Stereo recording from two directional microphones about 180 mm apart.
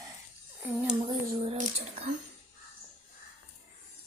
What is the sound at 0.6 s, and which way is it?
Speech, 10° right (ahead or behind).